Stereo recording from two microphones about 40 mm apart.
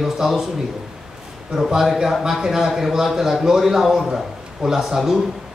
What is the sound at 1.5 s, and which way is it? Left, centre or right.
A man's voice, centre.